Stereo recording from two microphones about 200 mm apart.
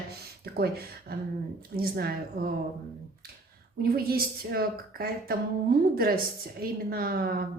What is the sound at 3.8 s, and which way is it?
Speech, 50° right (ahead or behind).